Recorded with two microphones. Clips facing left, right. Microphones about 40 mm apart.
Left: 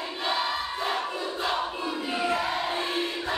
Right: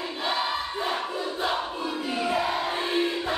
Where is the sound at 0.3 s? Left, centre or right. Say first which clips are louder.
Even; centre.